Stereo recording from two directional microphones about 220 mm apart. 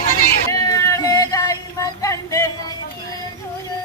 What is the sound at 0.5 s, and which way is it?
Music, 15° left (ahead or behind).